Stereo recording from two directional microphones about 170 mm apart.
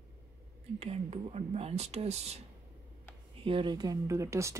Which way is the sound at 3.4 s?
30° right (ahead or behind).